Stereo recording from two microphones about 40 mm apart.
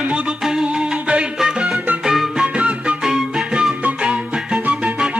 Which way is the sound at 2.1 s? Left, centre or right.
Centre.